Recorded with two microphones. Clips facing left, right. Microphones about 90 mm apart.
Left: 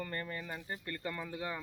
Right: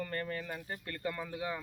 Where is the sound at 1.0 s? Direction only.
10° right (ahead or behind).